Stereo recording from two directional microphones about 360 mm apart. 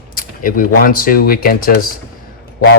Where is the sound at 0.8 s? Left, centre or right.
Left.